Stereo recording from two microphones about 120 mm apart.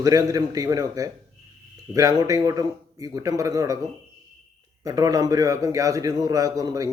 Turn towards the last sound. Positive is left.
turn(degrees=-30)  # may be behind; listen again after turning